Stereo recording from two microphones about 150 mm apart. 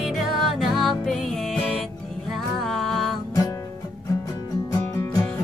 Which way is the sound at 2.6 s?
Centre (ahead or behind).